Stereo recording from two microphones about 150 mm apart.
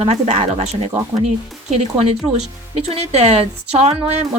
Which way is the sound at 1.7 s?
45° right (ahead or behind).